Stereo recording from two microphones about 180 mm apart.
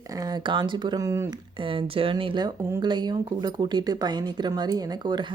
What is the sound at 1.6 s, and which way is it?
Speech, 30° right (ahead or behind).